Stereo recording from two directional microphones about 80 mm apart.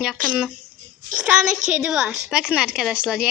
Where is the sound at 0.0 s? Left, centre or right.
Centre.